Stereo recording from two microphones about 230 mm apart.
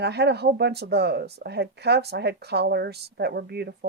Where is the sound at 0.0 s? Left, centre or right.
Right.